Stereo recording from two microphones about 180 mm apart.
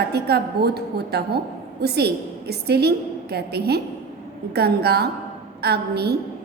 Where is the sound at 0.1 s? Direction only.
65° right (ahead or behind).